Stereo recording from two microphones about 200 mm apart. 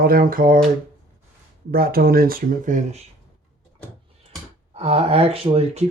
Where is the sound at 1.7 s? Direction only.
50° right (ahead or behind).